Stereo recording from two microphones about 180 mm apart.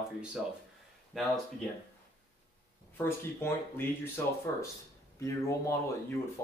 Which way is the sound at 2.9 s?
15° left (ahead or behind).